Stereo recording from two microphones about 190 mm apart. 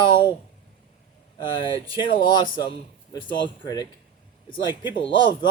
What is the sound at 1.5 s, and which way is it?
A man's voice, 25° left (ahead or behind).